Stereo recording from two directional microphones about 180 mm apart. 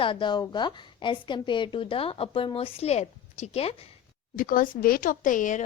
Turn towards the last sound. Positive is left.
turn(degrees=45)  # may be behind; listen again after turning